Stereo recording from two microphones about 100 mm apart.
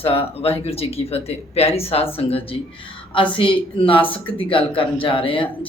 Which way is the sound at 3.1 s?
60° left (ahead or behind).